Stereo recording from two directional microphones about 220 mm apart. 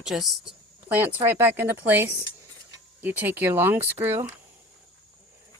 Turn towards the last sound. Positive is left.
turn(degrees=-10)  # may be behind; listen again after turning